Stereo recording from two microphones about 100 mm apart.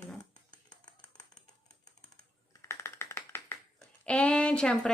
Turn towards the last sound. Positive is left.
turn(degrees=10)  # may be behind; listen again after turning